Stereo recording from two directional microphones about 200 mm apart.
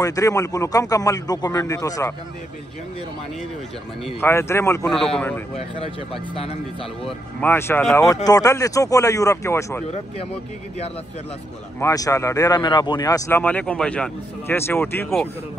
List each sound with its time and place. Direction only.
0.0 s speech: 15° left (ahead or behind)
4.2 s speech: 10° left (ahead or behind)
4.8 s a man's voice: 5° left (ahead or behind)
6.3 s speech: 25° left (ahead or behind)
7.1 s speech: 10° left (ahead or behind)
11.8 s speech: 15° left (ahead or behind)